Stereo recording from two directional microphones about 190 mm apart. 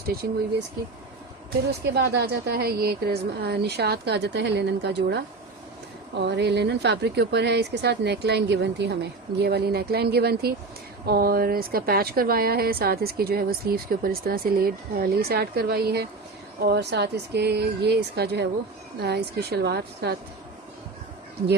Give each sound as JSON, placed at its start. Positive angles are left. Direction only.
{"t": 1.9, "sound": "speech", "side_deg": -60}